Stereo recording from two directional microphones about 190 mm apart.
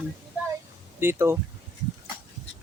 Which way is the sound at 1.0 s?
15° right (ahead or behind).